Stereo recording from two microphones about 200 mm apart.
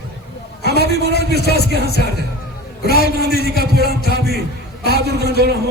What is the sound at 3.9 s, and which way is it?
Speech, 55° right (ahead or behind).